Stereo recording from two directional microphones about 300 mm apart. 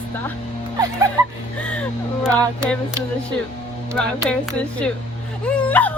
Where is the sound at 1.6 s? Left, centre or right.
Centre.